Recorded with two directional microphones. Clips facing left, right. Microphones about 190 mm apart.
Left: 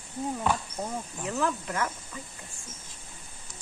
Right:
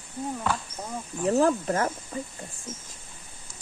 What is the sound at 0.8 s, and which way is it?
Speech, 20° left (ahead or behind).